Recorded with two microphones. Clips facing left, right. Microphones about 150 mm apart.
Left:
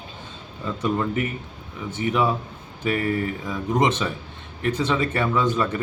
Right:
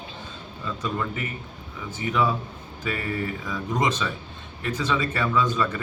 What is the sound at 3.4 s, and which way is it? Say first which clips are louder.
Speech: left 4 dB; 25° left (ahead or behind).